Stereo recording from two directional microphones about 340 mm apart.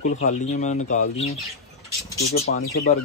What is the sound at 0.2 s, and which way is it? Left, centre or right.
Speech, left.